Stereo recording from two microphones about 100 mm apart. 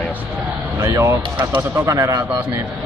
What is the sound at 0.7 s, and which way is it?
A man's voice, 30° right (ahead or behind).